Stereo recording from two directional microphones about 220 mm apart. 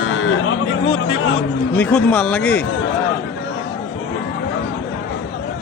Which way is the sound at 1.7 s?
5° left (ahead or behind).